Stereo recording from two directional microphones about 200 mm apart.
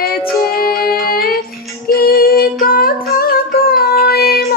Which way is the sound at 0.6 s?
50° left (ahead or behind).